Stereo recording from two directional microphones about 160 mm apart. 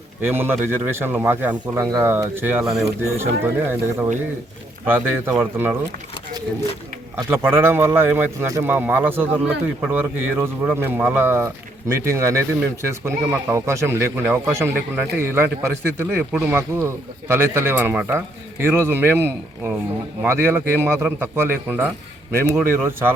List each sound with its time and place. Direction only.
0.2 s speech: 15° right (ahead or behind)
7.2 s a man's voice: 15° right (ahead or behind)